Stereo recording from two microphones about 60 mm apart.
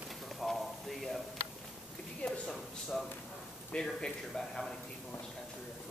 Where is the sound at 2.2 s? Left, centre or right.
Centre.